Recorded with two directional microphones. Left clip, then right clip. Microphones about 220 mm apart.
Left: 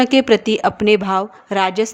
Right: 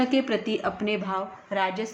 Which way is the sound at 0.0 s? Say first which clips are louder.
Left 11 dB; 50° left (ahead or behind).